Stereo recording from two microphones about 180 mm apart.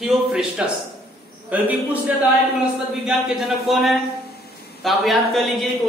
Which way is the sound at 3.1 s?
Centre (ahead or behind).